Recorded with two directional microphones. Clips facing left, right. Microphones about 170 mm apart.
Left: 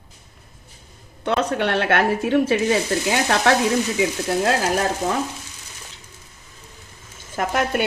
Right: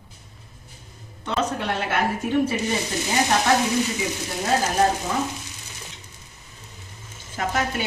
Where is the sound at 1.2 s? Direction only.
70° left (ahead or behind).